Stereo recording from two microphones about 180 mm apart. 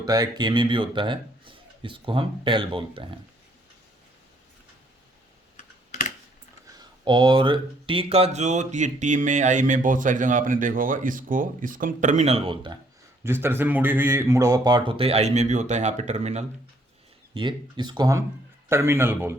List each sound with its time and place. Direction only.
0.0 s speech: 20° right (ahead or behind)
6.7 s speech: 25° right (ahead or behind)
13.2 s speech: 15° right (ahead or behind); by 16.5 s 40° right (ahead or behind)
17.3 s a man's voice: 25° right (ahead or behind)